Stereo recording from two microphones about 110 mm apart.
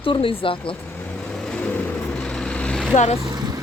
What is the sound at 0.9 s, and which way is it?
Vehicle, 15° left (ahead or behind).